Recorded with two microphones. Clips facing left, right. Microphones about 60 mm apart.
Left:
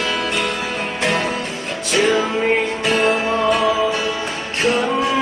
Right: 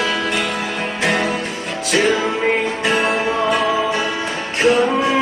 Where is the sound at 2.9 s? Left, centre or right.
Right.